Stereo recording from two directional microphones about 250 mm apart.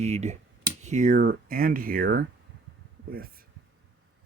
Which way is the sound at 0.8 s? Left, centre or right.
Right.